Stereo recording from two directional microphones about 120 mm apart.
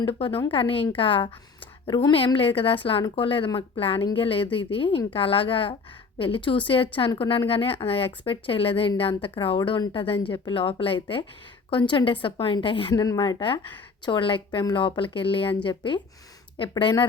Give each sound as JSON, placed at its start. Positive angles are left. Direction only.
{"t": 0.0, "sound": "speech", "side_deg": 50}
{"t": 12.9, "sound": "speech", "side_deg": 30}